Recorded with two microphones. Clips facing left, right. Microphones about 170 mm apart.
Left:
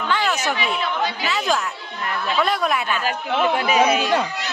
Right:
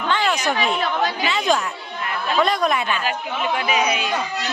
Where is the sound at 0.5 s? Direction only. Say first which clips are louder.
Right 2 dB; 45° right (ahead or behind).